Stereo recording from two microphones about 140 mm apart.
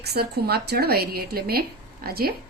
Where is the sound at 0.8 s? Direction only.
90° right.